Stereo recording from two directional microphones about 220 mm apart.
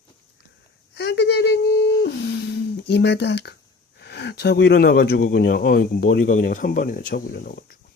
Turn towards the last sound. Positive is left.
turn(degrees=40)  # may be behind; listen again after turning